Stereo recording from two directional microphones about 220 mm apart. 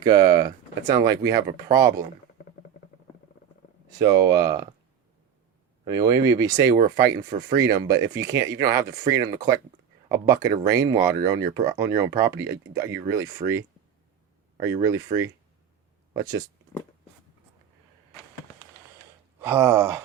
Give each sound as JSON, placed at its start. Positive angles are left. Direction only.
{"t": 0.0, "sound": "speech", "side_deg": -20}
{"t": 3.8, "sound": "speech", "side_deg": -15}
{"t": 5.8, "sound": "speech", "side_deg": -15}
{"t": 19.4, "sound": "speech", "side_deg": -10}